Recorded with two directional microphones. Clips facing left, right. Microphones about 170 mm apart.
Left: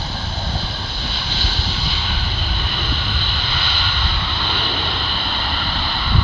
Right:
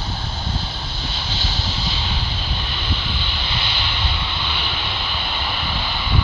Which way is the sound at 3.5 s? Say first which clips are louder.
Even; 20° right (ahead or behind).